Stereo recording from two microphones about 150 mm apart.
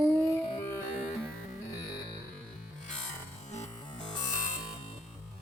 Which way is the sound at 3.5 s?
50° left (ahead or behind).